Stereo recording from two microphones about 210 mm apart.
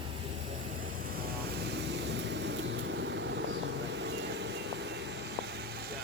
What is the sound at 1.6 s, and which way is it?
Vehicle, 55° right (ahead or behind).